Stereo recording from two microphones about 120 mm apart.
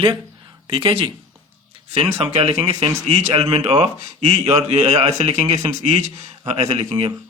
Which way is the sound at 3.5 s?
50° right (ahead or behind).